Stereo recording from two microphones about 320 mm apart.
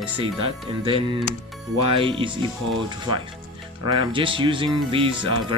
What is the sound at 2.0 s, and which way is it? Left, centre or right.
Speech, centre.